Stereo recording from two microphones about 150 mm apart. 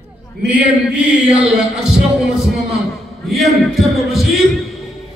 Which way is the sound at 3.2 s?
Centre (ahead or behind).